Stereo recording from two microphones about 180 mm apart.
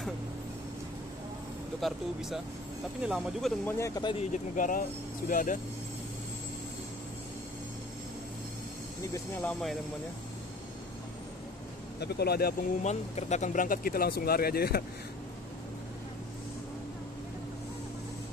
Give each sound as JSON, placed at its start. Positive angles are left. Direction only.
{"t": 1.8, "sound": "speech", "side_deg": 0}
{"t": 3.6, "sound": "speech", "side_deg": 15}
{"t": 4.3, "sound": "speech", "side_deg": 50}
{"t": 9.1, "sound": "speech", "side_deg": 10}
{"t": 12.0, "sound": "speech", "side_deg": 65}
{"t": 12.8, "sound": "speech", "side_deg": 40}